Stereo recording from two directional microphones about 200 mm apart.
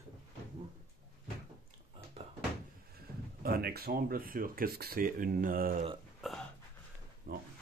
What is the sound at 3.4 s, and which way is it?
Speech, 50° right (ahead or behind).